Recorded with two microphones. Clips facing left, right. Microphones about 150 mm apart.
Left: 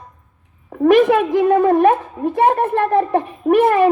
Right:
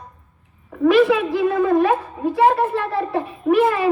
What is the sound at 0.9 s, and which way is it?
A woman's voice, 50° left (ahead or behind).